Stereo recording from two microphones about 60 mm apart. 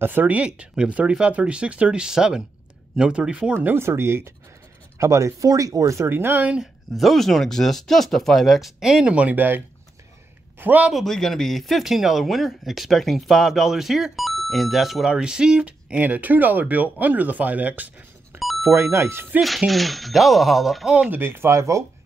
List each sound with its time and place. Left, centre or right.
0.0 s speech: right
3.5 s speech: right
4.9 s speech: right
6.0 s speech: right
6.6 s speech: centre
9.1 s speech: right
10.6 s speech: right
10.9 s speech: centre
16.0 s speech: right
18.6 s speech: right
19.4 s speech: centre
21.1 s speech: right
21.5 s speech: right